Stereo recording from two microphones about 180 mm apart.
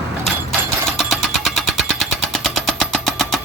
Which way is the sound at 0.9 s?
Centre (ahead or behind).